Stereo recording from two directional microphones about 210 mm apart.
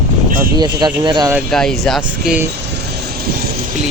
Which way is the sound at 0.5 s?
20° right (ahead or behind).